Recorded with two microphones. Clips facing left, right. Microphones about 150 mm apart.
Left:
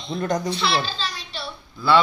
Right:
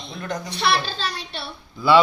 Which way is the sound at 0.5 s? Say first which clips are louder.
Right 1 dB; 60° right (ahead or behind).